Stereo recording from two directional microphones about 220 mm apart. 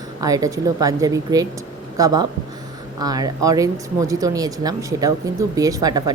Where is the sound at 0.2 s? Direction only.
15° right (ahead or behind).